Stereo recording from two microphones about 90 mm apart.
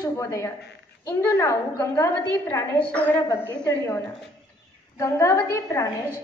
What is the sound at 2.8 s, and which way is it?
Speech, 15° left (ahead or behind).